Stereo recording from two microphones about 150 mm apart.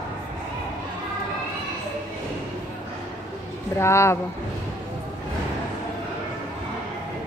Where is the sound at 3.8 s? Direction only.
20° left (ahead or behind).